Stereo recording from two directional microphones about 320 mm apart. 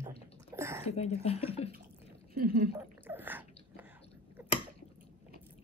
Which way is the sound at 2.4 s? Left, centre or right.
Right.